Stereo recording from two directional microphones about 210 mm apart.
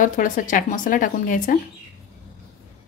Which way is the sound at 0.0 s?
40° left (ahead or behind).